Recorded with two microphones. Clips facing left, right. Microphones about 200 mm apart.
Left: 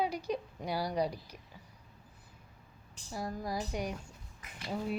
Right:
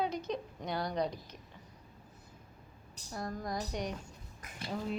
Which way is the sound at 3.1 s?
5° left (ahead or behind).